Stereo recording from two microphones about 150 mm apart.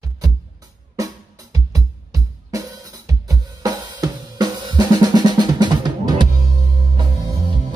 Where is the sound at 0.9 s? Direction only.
20° right (ahead or behind).